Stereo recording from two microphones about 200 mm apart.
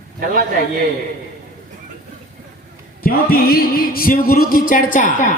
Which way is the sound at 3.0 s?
45° left (ahead or behind).